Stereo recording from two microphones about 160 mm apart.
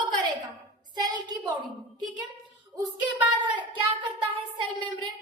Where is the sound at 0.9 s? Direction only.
25° right (ahead or behind).